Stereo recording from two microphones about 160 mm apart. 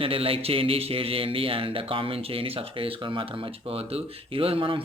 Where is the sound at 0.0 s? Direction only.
35° right (ahead or behind).